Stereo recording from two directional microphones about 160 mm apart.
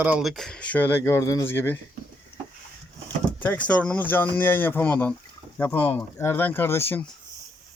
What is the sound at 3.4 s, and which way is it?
Speech, 10° left (ahead or behind).